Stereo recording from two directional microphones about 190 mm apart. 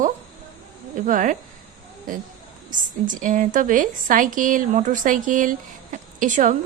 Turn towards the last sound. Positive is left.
turn(degrees=-40)  # may be behind; listen again after turning